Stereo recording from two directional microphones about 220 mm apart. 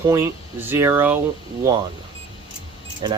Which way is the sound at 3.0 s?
20° right (ahead or behind).